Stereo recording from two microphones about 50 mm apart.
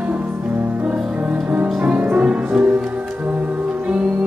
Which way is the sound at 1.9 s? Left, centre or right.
Right.